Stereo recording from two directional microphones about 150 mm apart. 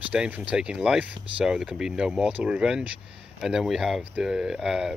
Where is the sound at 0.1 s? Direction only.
5° right (ahead or behind).